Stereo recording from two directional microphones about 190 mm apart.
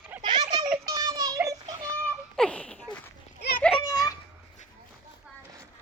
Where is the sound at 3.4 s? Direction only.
55° left (ahead or behind).